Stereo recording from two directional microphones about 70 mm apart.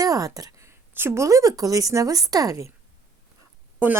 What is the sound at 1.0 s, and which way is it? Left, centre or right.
Speech, right.